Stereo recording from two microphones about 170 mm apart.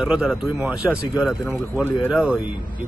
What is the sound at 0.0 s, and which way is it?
A man's voice, 5° right (ahead or behind).